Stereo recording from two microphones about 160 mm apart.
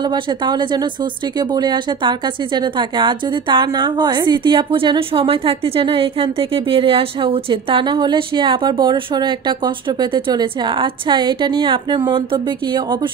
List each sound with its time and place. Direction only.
0.1 s a woman's voice: 25° right (ahead or behind)